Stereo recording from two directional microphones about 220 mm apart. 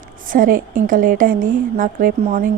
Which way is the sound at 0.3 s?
40° right (ahead or behind).